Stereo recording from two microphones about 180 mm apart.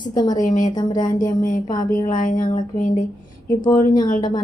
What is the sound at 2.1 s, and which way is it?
Speech, 50° left (ahead or behind).